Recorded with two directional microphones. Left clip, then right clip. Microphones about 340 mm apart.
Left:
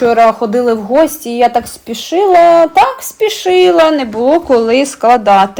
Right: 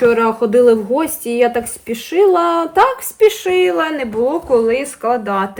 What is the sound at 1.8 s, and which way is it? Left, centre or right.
Speech, centre.